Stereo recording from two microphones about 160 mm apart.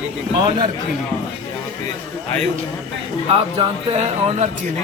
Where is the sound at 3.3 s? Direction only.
40° right (ahead or behind).